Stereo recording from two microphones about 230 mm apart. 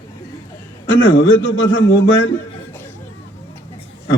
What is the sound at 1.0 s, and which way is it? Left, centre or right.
A man's voice, left.